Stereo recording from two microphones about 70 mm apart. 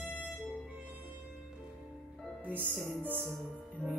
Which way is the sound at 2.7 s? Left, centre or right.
Left.